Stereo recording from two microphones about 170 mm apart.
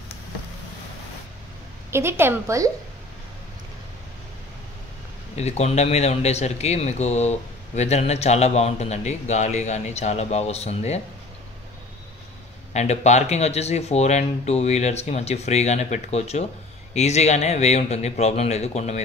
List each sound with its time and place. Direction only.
1.9 s a woman's voice: 15° right (ahead or behind)
5.3 s a man's voice: 40° left (ahead or behind)
12.7 s a man's voice: 40° left (ahead or behind)